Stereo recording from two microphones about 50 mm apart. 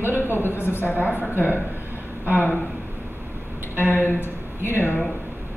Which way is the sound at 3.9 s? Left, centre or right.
Left.